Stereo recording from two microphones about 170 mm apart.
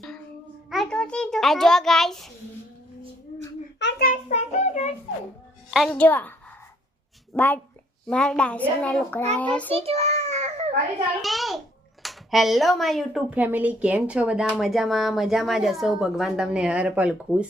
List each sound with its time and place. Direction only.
0.7 s a child's voice: centre (ahead or behind)
3.8 s child singing: 80° left; by 4.2 s 65° left (ahead or behind)
4.3 s child singing: 40° left (ahead or behind)
5.7 s a child's voice: 5° left (ahead or behind)
7.3 s a child's voice: 10° left (ahead or behind)
9.7 s a sound: 35° right (ahead or behind)
11.2 s speech: centre (ahead or behind)